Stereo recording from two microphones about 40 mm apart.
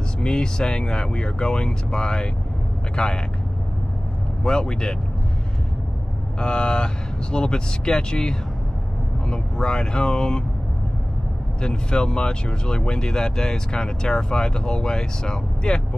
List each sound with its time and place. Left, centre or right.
0.2 s speech: left
4.4 s speech: centre
6.4 s speech: left
11.6 s speech: left